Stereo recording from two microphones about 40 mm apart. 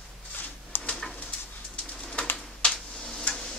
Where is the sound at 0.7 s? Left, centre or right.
Left.